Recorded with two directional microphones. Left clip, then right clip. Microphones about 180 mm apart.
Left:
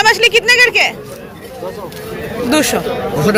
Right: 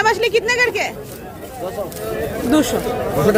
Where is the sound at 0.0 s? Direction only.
15° right (ahead or behind).